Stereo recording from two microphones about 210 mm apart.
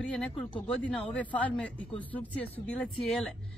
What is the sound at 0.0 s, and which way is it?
Speech, centre (ahead or behind).